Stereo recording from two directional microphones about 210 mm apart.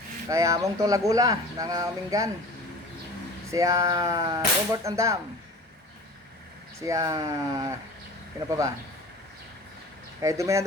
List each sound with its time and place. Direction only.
0.3 s speech: 15° right (ahead or behind)
3.5 s speech: 15° right (ahead or behind)
6.7 s speech: 15° right (ahead or behind)
10.2 s speech: 15° right (ahead or behind)